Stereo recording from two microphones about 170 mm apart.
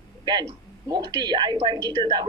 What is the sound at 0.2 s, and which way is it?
A man's voice, 25° right (ahead or behind).